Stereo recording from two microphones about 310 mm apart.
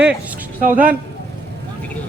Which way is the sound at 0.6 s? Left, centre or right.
Right.